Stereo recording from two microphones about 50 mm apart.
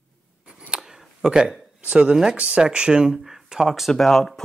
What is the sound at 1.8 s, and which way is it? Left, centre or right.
Speech, right.